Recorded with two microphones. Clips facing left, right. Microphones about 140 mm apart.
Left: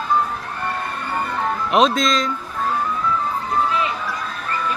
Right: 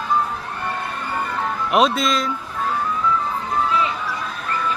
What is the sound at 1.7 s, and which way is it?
Speech, 5° right (ahead or behind).